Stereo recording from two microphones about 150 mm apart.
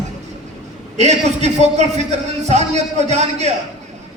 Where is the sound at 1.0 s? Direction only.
50° right (ahead or behind).